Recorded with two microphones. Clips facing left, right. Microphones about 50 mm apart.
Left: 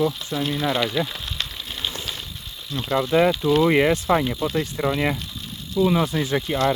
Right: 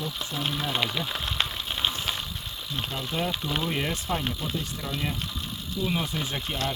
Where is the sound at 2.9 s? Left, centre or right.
Left.